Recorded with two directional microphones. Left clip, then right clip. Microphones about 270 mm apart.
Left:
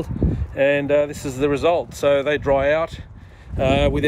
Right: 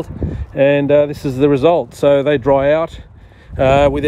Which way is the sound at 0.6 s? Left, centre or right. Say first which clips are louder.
Right 6 dB; right.